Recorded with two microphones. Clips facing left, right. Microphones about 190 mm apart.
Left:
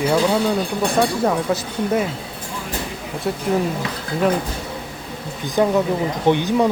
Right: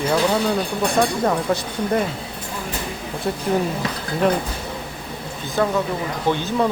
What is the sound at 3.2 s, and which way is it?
Speech, 5° left (ahead or behind).